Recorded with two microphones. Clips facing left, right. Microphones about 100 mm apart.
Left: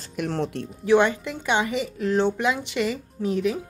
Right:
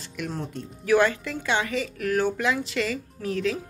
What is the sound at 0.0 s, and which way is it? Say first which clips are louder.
Speech: left 4 dB; 40° left (ahead or behind).